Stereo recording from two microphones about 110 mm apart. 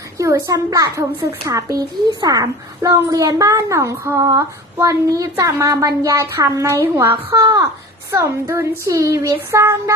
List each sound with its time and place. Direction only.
0.2 s a child's voice: 30° right (ahead or behind)
7.4 s a child's voice: 30° right (ahead or behind)